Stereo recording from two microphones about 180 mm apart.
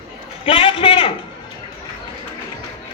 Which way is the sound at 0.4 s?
30° left (ahead or behind).